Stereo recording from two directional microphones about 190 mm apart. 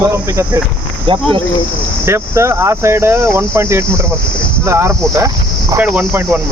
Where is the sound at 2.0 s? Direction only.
15° right (ahead or behind).